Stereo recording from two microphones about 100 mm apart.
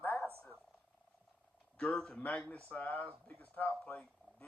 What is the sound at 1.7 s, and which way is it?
Speech, 10° left (ahead or behind).